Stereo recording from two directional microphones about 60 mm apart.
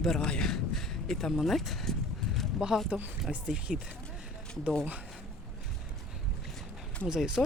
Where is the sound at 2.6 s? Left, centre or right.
Centre.